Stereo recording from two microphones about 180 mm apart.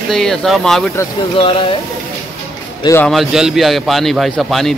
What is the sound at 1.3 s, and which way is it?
Speech, 30° left (ahead or behind).